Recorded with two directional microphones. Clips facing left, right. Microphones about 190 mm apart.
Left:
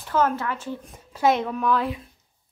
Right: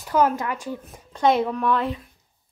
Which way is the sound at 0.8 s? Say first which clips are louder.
Right 1 dB; centre (ahead or behind).